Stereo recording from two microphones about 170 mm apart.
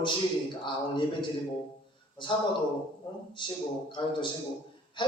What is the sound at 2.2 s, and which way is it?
A man's voice, 30° left (ahead or behind).